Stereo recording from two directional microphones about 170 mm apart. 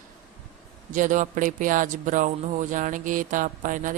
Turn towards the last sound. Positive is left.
turn(degrees=-50)  # may be behind; listen again after turning